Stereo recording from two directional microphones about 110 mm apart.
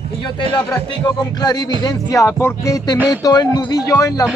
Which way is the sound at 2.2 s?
25° left (ahead or behind).